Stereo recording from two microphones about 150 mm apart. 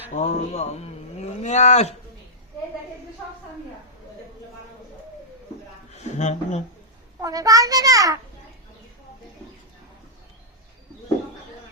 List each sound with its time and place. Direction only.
0.1 s speech: 50° left (ahead or behind)
5.9 s speech: 50° left (ahead or behind)
7.2 s a child's voice: 25° right (ahead or behind)